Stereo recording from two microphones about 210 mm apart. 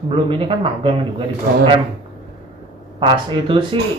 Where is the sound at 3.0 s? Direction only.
25° right (ahead or behind).